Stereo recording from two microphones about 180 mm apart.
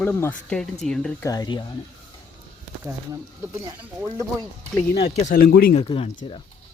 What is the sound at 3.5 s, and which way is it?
Speech, 10° right (ahead or behind).